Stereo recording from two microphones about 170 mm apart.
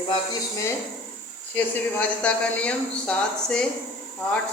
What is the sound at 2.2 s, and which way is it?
A woman's voice, 5° left (ahead or behind).